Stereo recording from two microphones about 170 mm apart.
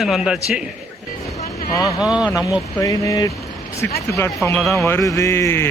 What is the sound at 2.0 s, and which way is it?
Speech, 5° right (ahead or behind).